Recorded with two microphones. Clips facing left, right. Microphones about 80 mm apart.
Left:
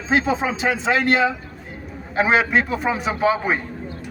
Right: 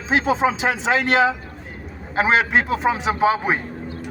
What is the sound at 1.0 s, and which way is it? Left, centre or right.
Speech, right.